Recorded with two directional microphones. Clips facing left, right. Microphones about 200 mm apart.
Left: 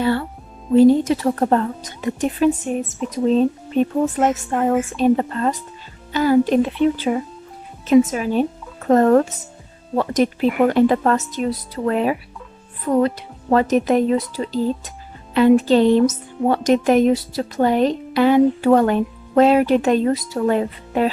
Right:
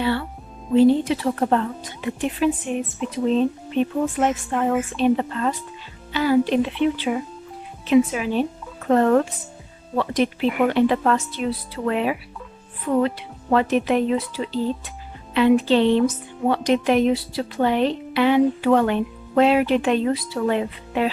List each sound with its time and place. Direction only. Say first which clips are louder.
0.0 s music: left 3 dB; 45° left (ahead or behind)
0.7 s speech: left 3 dB; 45° left (ahead or behind)